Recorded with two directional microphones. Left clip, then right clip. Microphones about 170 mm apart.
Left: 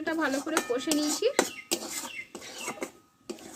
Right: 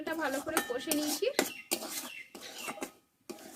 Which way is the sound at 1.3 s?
5° right (ahead or behind).